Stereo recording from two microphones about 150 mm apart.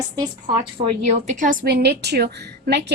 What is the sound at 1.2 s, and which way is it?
A woman's voice, 55° right (ahead or behind).